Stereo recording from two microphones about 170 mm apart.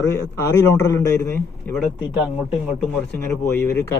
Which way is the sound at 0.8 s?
20° left (ahead or behind).